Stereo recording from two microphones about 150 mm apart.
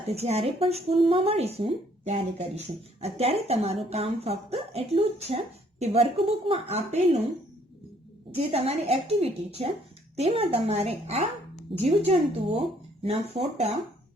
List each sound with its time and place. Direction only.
0.1 s a woman's voice: 45° right (ahead or behind)
8.5 s a woman's voice: 40° right (ahead or behind)